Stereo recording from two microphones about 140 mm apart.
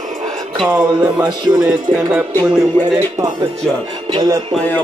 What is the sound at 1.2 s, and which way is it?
Speech, 30° right (ahead or behind).